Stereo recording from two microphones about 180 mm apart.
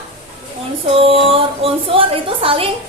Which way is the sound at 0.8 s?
30° right (ahead or behind).